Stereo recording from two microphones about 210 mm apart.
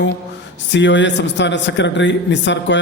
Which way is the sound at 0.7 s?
60° left (ahead or behind).